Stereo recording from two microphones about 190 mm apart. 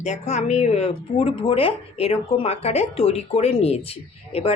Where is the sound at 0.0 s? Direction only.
35° left (ahead or behind).